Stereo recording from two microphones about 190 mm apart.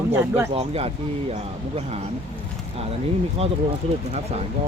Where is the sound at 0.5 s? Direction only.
30° right (ahead or behind).